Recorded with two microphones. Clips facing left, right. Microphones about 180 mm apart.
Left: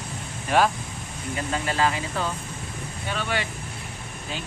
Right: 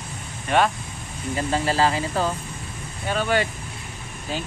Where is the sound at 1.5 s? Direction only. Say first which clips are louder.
Right 3 dB; 35° right (ahead or behind).